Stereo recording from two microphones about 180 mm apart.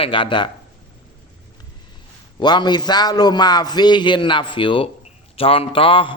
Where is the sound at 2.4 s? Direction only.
25° left (ahead or behind).